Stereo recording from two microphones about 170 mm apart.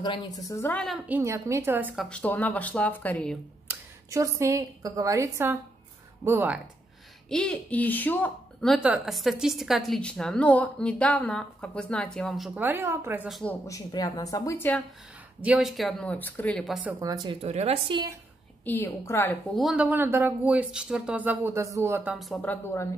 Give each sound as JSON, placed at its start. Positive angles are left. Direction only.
{"t": 0.0, "sound": "speech", "side_deg": 25}
{"t": 1.0, "sound": "speech", "side_deg": -15}
{"t": 2.0, "sound": "speech", "side_deg": 10}
{"t": 3.6, "sound": "a woman's voice", "side_deg": -15}
{"t": 7.2, "sound": "speech", "side_deg": 5}
{"t": 13.3, "sound": "speech", "side_deg": 5}
{"t": 13.7, "sound": "a woman's voice", "side_deg": 20}
{"t": 15.4, "sound": "speech", "side_deg": -5}
{"t": 17.0, "sound": "speech", "side_deg": -25}
{"t": 18.7, "sound": "speech", "side_deg": 15}
{"t": 19.5, "sound": "speech", "side_deg": -5}
{"t": 22.1, "sound": "speech", "side_deg": 0}